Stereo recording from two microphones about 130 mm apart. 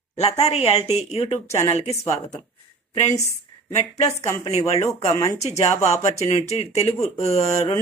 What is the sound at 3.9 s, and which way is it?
Speech, 55° left (ahead or behind).